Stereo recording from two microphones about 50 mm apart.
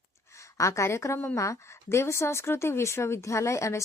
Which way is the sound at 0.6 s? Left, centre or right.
Left.